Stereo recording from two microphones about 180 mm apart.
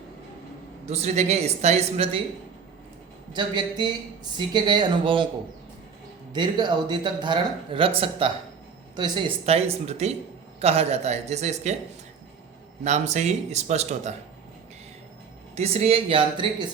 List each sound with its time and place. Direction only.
0.9 s speech: 35° right (ahead or behind)
3.3 s speech: 25° right (ahead or behind)
6.3 s speech: 25° right (ahead or behind)
12.8 s speech: 40° right (ahead or behind)
15.5 s speech: 35° right (ahead or behind)